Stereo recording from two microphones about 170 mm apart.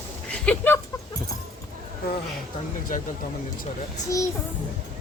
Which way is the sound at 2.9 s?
50° left (ahead or behind).